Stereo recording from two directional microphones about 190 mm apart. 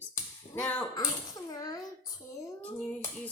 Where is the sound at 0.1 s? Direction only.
15° left (ahead or behind).